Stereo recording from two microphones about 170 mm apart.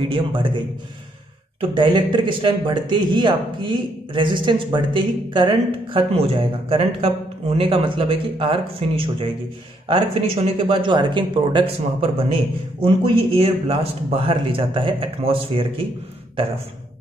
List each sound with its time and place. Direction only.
0.0 s speech: 30° right (ahead or behind)
1.6 s speech: 25° right (ahead or behind)